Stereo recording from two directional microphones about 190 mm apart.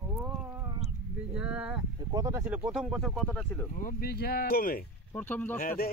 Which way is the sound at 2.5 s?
5° right (ahead or behind).